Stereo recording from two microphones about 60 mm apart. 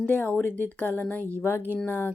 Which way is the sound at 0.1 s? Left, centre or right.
Left.